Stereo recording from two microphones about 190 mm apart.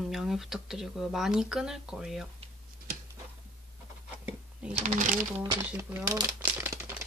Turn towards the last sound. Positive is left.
turn(degrees=-10)  # may be behind; listen again after turning